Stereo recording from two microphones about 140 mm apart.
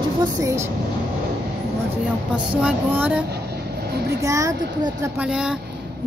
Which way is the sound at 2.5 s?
10° right (ahead or behind).